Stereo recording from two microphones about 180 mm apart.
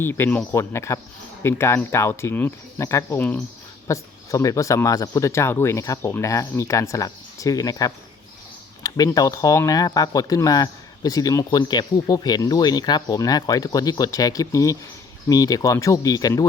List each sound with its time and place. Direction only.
0.0 s speech: 10° left (ahead or behind)